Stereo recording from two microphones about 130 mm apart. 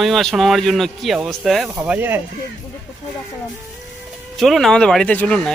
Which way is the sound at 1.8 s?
15° right (ahead or behind).